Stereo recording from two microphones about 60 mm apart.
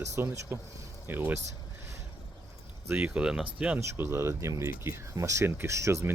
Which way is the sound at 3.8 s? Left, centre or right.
Right.